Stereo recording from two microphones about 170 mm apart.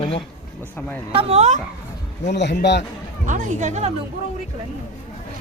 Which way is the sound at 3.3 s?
45° right (ahead or behind).